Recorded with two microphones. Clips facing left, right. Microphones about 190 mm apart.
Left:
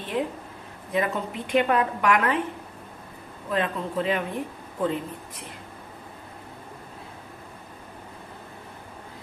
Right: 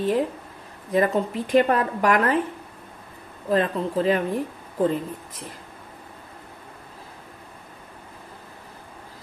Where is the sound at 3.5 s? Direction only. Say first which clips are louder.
Right 5 dB; 40° right (ahead or behind).